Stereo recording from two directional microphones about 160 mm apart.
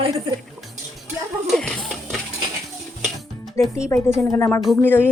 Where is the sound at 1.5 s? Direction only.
5° left (ahead or behind).